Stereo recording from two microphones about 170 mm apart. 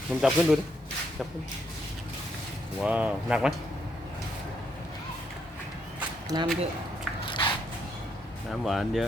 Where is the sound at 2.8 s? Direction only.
5° right (ahead or behind).